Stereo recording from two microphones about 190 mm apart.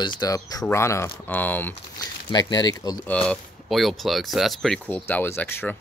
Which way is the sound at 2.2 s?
20° left (ahead or behind).